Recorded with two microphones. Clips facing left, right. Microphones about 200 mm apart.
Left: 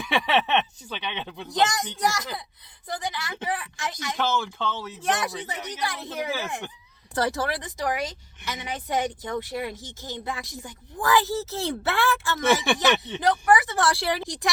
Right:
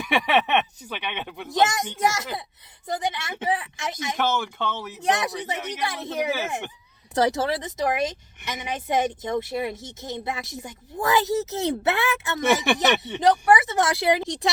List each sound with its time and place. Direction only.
0.1 s speech: 15° right (ahead or behind)